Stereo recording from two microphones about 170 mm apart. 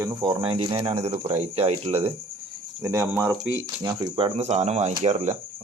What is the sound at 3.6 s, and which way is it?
Speech, 20° right (ahead or behind).